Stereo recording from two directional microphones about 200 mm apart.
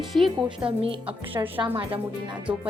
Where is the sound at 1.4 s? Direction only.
15° right (ahead or behind).